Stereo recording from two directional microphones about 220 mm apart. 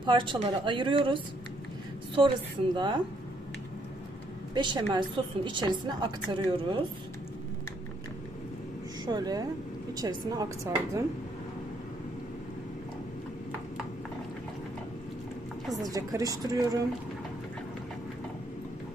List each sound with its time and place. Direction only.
0.0 s a woman's voice: 20° right (ahead or behind)
2.7 s a woman's voice: 20° right (ahead or behind)
4.5 s a woman's voice: 20° right (ahead or behind)
9.0 s a woman's voice: 20° right (ahead or behind)
15.8 s a woman's voice: 15° right (ahead or behind)